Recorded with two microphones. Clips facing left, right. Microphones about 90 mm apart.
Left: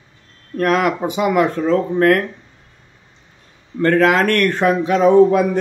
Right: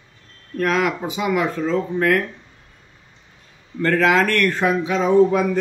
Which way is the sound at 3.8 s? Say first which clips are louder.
Left 3 dB; 50° left (ahead or behind).